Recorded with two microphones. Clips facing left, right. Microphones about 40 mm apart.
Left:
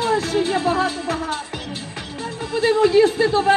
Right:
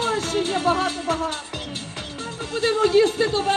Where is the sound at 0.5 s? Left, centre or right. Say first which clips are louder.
Left 2 dB; right.